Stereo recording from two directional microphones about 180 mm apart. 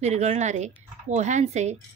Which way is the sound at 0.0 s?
40° right (ahead or behind).